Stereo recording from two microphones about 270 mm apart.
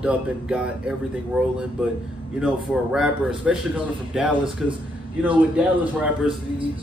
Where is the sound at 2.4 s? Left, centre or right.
Centre.